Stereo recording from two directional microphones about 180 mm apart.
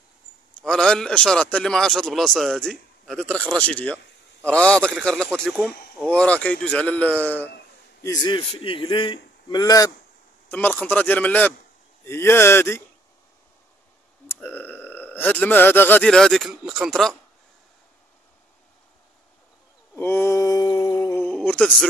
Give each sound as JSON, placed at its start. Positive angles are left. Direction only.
{"t": 0.6, "sound": "a man's voice", "side_deg": 5}
{"t": 8.0, "sound": "a man's voice", "side_deg": 20}
{"t": 10.5, "sound": "a man's voice", "side_deg": 10}
{"t": 14.2, "sound": "speech", "side_deg": 10}
{"t": 20.0, "sound": "mantra", "side_deg": 15}
{"t": 20.9, "sound": "a sound", "side_deg": 15}
{"t": 21.3, "sound": "a sound", "side_deg": 5}